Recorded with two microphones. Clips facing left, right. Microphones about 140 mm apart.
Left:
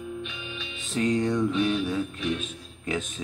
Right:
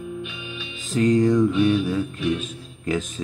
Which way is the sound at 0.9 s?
Centre (ahead or behind).